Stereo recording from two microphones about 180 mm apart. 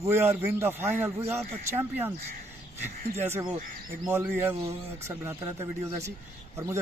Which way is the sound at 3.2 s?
15° right (ahead or behind).